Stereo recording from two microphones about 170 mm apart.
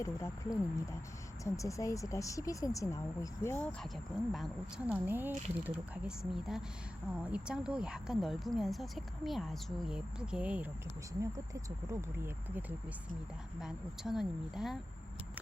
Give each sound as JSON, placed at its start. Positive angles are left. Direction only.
{"t": 0.0, "sound": "speech", "side_deg": 15}
{"t": 5.0, "sound": "speech", "side_deg": -10}
{"t": 11.2, "sound": "speech", "side_deg": -20}